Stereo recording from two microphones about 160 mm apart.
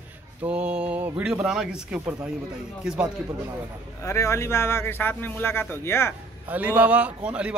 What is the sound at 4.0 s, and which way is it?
A man's voice, 20° left (ahead or behind).